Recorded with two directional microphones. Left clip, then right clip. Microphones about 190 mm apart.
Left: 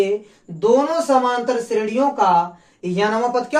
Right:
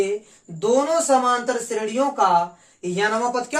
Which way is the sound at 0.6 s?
30° right (ahead or behind).